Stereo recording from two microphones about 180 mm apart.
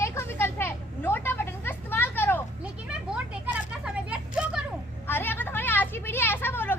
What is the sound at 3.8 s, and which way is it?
Vehicle, 5° right (ahead or behind).